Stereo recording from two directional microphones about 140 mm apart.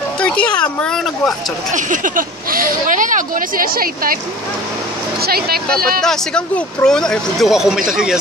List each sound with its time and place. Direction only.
0.2 s speech: 10° left (ahead or behind)
1.7 s speech: 65° right (ahead or behind); by 4.2 s 90° right
5.2 s speech: 90° right
6.0 s speech: 5° left (ahead or behind)